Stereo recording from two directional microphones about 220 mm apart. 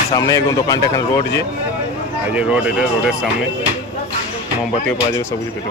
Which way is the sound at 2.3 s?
5° right (ahead or behind).